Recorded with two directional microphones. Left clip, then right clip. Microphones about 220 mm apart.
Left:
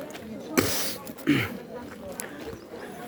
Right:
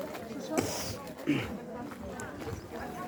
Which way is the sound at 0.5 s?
40° left (ahead or behind).